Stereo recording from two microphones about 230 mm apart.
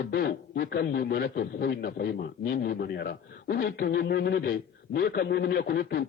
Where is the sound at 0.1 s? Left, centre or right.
Left.